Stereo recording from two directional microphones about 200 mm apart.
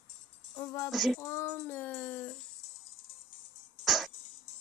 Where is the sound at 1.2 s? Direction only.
15° left (ahead or behind).